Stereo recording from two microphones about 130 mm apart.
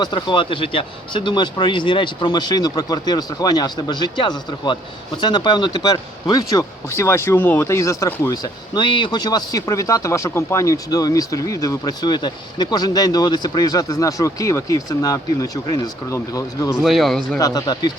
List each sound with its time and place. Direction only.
0.0 s speech: 35° left (ahead or behind)
16.8 s speech: centre (ahead or behind)
17.3 s speech: 25° left (ahead or behind)